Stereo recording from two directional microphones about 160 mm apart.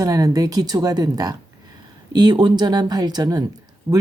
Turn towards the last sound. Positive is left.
turn(degrees=-5)  # may be behind; listen again after turning